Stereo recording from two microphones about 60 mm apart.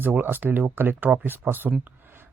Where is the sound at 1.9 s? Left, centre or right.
Right.